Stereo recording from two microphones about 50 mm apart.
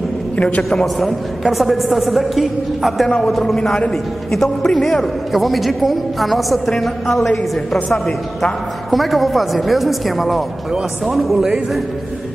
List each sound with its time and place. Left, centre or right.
0.4 s a man's voice: left
0.7 s a woman's voice: centre